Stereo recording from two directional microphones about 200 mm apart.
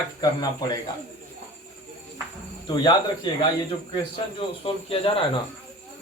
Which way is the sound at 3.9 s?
25° left (ahead or behind).